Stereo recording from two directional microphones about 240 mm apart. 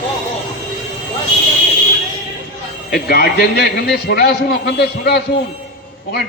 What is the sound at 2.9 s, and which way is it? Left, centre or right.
A man's voice, left.